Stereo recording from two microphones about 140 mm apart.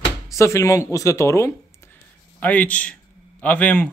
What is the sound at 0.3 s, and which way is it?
Speech, 20° left (ahead or behind).